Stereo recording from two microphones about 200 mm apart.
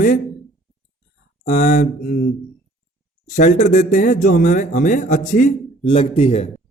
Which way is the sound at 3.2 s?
40° left (ahead or behind).